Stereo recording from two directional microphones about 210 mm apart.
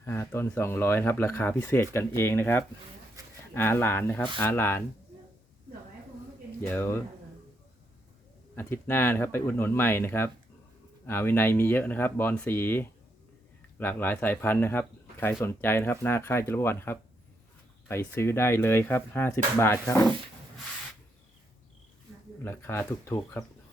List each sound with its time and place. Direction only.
0.0 s speech: 10° left (ahead or behind)
3.2 s a sound: 15° right (ahead or behind)
3.5 s speech: 10° left (ahead or behind)
6.6 s speech: 10° left (ahead or behind)
8.5 s speech: 10° left (ahead or behind)
22.4 s speech: 10° left (ahead or behind)